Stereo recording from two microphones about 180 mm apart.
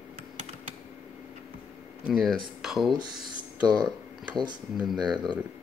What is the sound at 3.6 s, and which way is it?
Speech, 25° right (ahead or behind).